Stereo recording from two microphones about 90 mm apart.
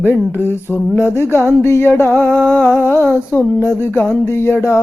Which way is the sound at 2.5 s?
20° left (ahead or behind).